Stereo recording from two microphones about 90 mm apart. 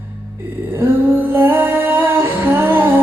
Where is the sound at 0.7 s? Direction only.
25° right (ahead or behind).